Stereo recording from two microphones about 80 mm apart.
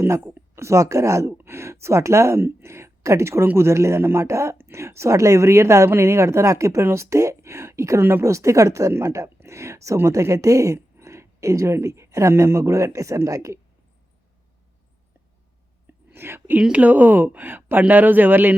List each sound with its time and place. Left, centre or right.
0.0 s speech: right
15.9 s whispering: right
16.6 s speech: centre